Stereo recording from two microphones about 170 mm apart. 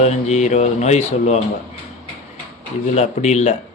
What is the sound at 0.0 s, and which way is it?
Speech, 40° left (ahead or behind).